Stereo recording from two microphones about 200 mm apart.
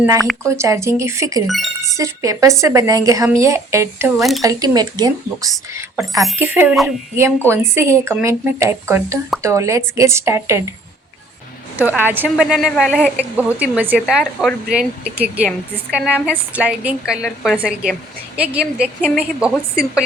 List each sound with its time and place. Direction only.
0.0 s a woman's voice: 15° right (ahead or behind)
1.5 s speech: centre (ahead or behind)
2.0 s a woman's voice: 15° right (ahead or behind)
4.2 s speech: centre (ahead or behind)
4.4 s speech: 20° right (ahead or behind)
6.0 s a woman's voice: centre (ahead or behind)
11.8 s a woman's voice: 10° right (ahead or behind)